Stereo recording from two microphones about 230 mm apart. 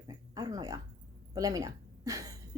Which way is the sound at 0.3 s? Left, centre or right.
Centre.